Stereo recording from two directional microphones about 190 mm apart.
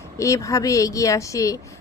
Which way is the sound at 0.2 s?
15° left (ahead or behind).